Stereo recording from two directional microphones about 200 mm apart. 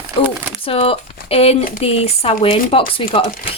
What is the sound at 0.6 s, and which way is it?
Speech, 30° left (ahead or behind).